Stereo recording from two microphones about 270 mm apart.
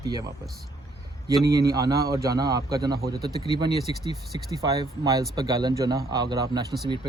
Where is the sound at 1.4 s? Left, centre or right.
Centre.